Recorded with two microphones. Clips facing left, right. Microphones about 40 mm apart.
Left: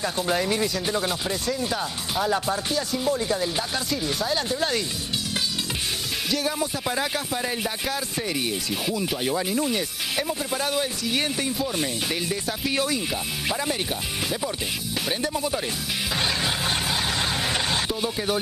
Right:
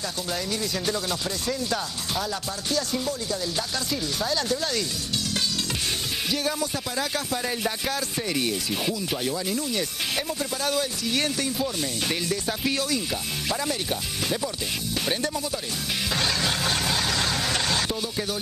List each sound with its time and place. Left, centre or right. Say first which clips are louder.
0.0 s music: left 6 dB; left
1.7 s speech: left 1 dB; centre
2.2 s music: left 6 dB; left
7.6 s speech: even; centre
9.2 s music: left 3 dB; left
9.8 s speech: left 1 dB; centre
12.7 s music: left 2 dB; left
13.1 s speech: left 1 dB; centre
15.3 s music: left 3 dB; left
16.2 s vehicle: left 1 dB; centre
18.0 s music: left 4 dB; left